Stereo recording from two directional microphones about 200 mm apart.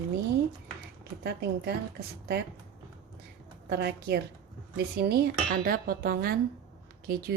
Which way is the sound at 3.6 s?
55° right (ahead or behind).